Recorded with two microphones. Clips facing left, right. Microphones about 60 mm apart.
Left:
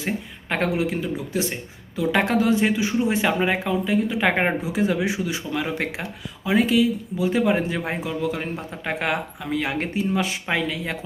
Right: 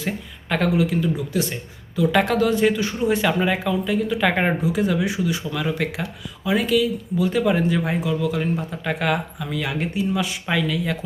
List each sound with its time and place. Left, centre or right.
0.0 s speech: left